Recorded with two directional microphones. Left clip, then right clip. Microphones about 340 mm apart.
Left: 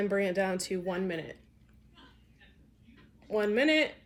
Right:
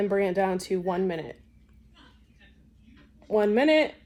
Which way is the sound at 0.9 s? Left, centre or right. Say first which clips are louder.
Right 6 dB; right.